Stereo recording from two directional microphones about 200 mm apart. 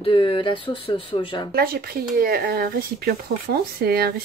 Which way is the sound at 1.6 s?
50° right (ahead or behind).